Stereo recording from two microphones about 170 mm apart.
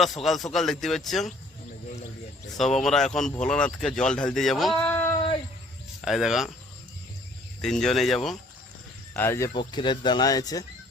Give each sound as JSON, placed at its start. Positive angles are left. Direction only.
{"t": 0.0, "sound": "speech", "side_deg": 0}
{"t": 2.7, "sound": "speech", "side_deg": 5}
{"t": 6.0, "sound": "speech", "side_deg": 0}
{"t": 7.6, "sound": "speech", "side_deg": 5}
{"t": 9.1, "sound": "speech", "side_deg": 15}
{"t": 9.5, "sound": "speech", "side_deg": 25}